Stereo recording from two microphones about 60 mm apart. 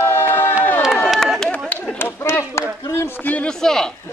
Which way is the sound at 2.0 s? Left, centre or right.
Left.